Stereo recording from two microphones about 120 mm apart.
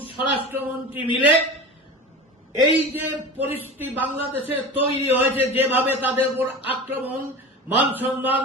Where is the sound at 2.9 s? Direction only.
15° right (ahead or behind).